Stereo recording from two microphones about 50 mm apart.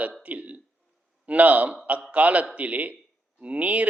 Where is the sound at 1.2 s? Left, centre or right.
Right.